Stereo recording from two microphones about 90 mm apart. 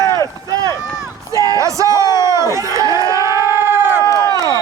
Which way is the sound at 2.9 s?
45° left (ahead or behind).